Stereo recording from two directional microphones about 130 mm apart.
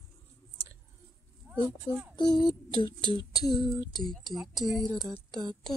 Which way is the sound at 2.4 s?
35° left (ahead or behind).